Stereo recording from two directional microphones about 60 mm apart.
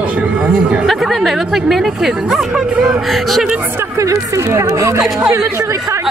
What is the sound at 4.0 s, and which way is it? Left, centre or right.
Speech, right.